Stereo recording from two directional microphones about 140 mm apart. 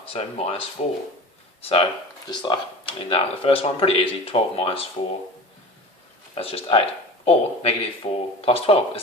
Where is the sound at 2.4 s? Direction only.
35° left (ahead or behind).